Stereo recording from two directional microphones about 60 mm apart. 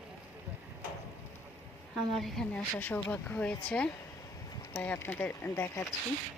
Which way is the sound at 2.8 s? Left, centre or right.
Left.